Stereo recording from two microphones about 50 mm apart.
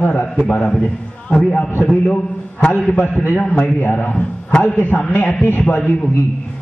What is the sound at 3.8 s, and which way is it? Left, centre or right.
A man's voice, left.